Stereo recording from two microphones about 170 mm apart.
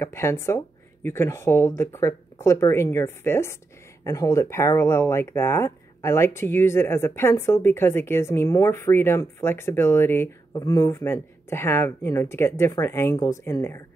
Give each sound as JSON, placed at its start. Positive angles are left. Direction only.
{"t": 0.0, "sound": "speech", "side_deg": 15}